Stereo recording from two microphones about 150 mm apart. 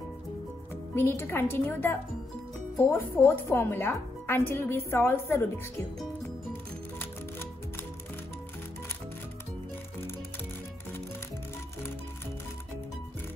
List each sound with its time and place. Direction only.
0.9 s speech: 15° left (ahead or behind)
6.5 s music: 15° left (ahead or behind)